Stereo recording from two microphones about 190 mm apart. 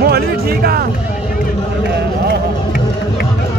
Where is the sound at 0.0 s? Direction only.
55° right (ahead or behind).